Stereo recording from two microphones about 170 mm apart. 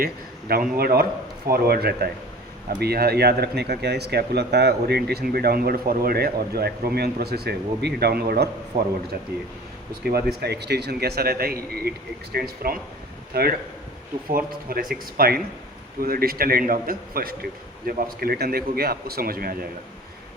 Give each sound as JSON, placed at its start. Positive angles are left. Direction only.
{"t": 0.0, "sound": "a man's voice", "side_deg": -60}
{"t": 10.0, "sound": "a man's voice", "side_deg": -65}